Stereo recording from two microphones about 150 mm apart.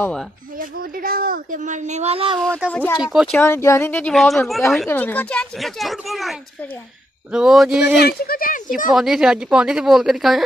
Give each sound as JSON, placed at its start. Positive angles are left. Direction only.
{"t": 0.6, "sound": "speech", "side_deg": -75}
{"t": 3.0, "sound": "a woman's voice", "side_deg": -5}
{"t": 3.3, "sound": "a woman's voice", "side_deg": 15}
{"t": 4.8, "sound": "a woman's voice", "side_deg": 10}
{"t": 7.3, "sound": "a woman's voice", "side_deg": -5}
{"t": 8.0, "sound": "speech", "side_deg": 90}
{"t": 8.9, "sound": "a woman's voice", "side_deg": -5}